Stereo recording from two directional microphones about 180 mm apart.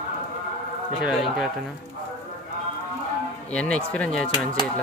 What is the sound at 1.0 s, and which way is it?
Speech, 5° right (ahead or behind).